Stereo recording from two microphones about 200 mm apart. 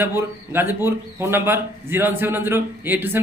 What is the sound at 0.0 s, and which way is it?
A man's voice, 10° right (ahead or behind).